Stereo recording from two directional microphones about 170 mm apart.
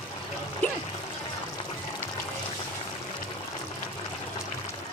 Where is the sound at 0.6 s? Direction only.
10° left (ahead or behind).